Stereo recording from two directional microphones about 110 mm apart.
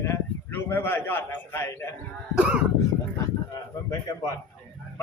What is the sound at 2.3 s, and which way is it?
Speech, 10° right (ahead or behind).